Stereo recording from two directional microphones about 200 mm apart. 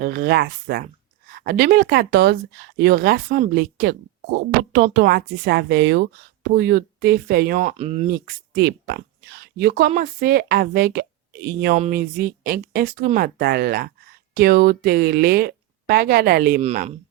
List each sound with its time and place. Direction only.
0.0 s speech: 45° right (ahead or behind)
7.6 s speech: 30° right (ahead or behind)
8.1 s speech: 50° right (ahead or behind)
16.6 s speech: 35° right (ahead or behind)